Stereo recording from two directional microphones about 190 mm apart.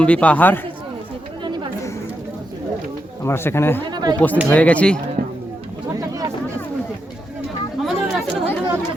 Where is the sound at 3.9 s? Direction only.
20° right (ahead or behind).